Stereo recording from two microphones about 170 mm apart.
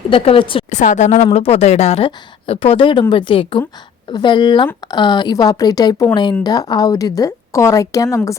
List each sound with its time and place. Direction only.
0.1 s speech: 30° left (ahead or behind)
0.7 s a woman's voice: 45° left (ahead or behind); by 8.4 s 20° left (ahead or behind)